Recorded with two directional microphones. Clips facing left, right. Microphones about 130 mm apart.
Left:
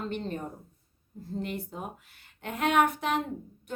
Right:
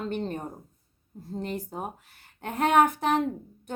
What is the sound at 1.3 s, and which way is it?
A woman's voice, 40° right (ahead or behind).